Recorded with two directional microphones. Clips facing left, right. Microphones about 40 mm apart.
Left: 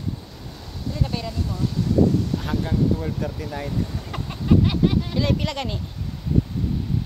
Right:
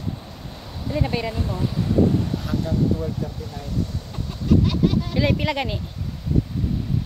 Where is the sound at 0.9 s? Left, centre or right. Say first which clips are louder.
Right 4 dB; right.